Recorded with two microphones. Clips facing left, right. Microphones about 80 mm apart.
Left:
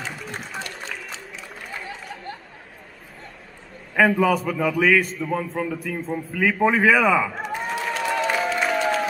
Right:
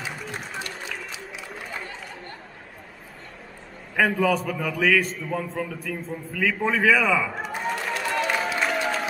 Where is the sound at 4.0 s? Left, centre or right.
Centre.